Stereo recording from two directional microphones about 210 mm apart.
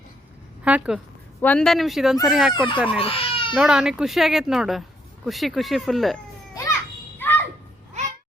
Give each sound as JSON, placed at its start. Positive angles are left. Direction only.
{"t": 0.6, "sound": "speech", "side_deg": -5}
{"t": 1.4, "sound": "speech", "side_deg": 5}
{"t": 3.0, "sound": "speech", "side_deg": 25}
{"t": 3.5, "sound": "speech", "side_deg": -5}
{"t": 7.2, "sound": "a sound", "side_deg": 10}